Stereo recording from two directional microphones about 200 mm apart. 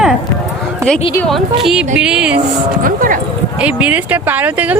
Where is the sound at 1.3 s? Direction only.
Centre (ahead or behind).